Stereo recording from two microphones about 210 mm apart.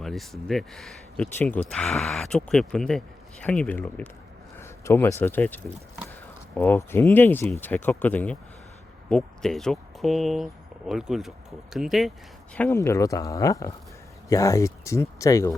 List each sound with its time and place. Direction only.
0.0 s speech: centre (ahead or behind)
12.5 s speech: 10° left (ahead or behind)